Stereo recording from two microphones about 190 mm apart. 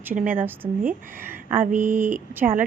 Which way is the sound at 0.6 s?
30° right (ahead or behind).